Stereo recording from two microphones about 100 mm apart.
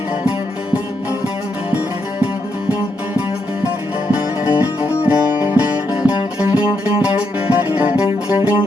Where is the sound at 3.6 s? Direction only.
15° right (ahead or behind).